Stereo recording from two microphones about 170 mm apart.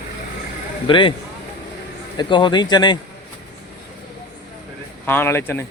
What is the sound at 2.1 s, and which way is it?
Speech, 25° left (ahead or behind).